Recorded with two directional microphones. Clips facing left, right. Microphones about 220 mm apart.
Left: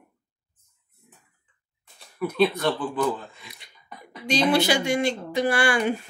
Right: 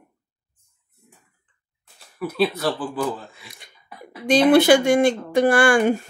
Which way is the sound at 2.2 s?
5° right (ahead or behind).